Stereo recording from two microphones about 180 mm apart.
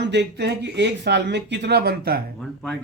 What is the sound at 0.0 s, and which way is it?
Speech, 70° right (ahead or behind).